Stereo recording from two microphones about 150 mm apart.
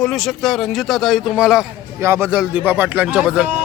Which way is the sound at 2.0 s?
15° right (ahead or behind).